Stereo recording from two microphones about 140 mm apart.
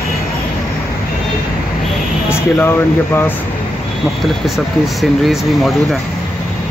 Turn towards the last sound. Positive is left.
turn(degrees=0)  # may be behind; listen again after turning